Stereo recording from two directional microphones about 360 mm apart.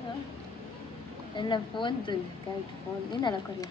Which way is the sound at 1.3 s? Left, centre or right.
Centre.